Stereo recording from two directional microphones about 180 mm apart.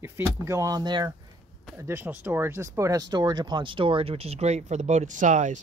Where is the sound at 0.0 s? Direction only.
15° right (ahead or behind).